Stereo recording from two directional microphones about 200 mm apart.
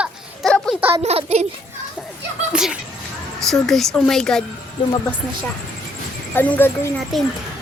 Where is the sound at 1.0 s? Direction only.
35° right (ahead or behind).